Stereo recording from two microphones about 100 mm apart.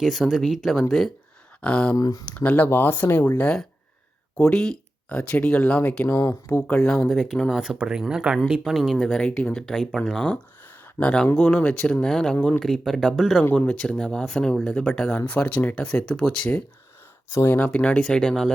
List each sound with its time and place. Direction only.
0.0 s speech: 5° right (ahead or behind)
1.6 s speech: 10° left (ahead or behind)
2.0 s speech: 40° left (ahead or behind)
2.2 s speech: 15° left (ahead or behind)
4.4 s speech: 5° left (ahead or behind)
6.1 s speech: 35° left (ahead or behind)
6.7 s speech: 5° left (ahead or behind)
13.4 s speech: 15° left (ahead or behind)
15.3 s speech: 10° left (ahead or behind)
17.3 s speech: 25° left (ahead or behind)